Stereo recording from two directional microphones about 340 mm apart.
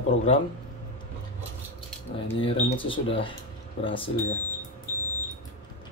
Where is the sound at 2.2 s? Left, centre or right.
Centre.